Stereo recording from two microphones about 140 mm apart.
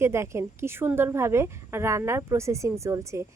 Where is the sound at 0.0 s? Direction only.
20° right (ahead or behind).